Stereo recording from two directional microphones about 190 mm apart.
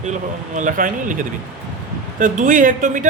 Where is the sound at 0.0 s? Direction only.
40° right (ahead or behind).